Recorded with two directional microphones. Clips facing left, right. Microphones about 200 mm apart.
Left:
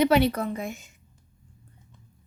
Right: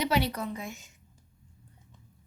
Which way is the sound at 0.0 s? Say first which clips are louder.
Left 8 dB; 55° left (ahead or behind).